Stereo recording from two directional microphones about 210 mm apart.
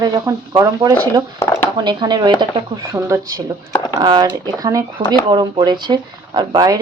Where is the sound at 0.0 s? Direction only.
15° right (ahead or behind).